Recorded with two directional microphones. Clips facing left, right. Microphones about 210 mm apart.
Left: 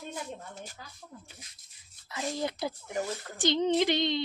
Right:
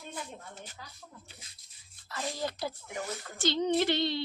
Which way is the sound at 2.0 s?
20° left (ahead or behind).